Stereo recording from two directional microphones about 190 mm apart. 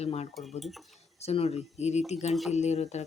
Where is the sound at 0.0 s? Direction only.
35° left (ahead or behind).